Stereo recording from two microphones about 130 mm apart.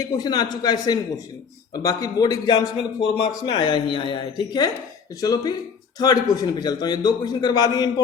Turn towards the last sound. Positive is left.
turn(degrees=30)  # may be behind; listen again after turning